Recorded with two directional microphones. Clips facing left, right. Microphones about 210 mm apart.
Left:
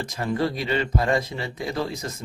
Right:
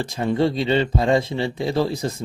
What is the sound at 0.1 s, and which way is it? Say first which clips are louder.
Speech: right 5 dB; 25° right (ahead or behind).